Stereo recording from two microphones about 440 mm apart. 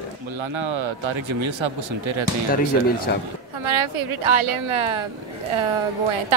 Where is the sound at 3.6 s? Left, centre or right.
Right.